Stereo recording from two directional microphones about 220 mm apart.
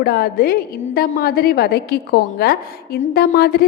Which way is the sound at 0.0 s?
45° left (ahead or behind).